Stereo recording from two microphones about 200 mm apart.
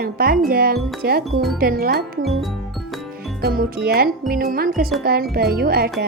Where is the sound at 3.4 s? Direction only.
50° right (ahead or behind).